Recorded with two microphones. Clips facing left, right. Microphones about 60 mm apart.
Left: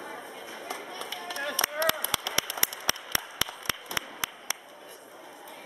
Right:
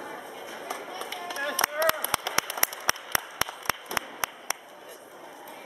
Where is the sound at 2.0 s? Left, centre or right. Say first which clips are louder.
Right 3 dB; right.